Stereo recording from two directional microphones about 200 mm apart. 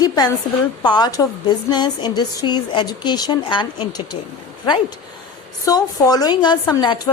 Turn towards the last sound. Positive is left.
turn(degrees=20)  # may be behind; listen again after turning